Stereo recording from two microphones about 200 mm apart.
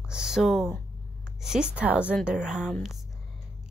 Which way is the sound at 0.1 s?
5° right (ahead or behind).